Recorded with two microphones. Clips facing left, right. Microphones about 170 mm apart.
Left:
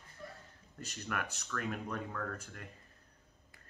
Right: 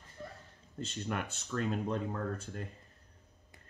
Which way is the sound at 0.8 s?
25° right (ahead or behind).